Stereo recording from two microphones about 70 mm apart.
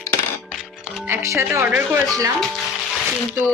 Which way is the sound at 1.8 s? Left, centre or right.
Right.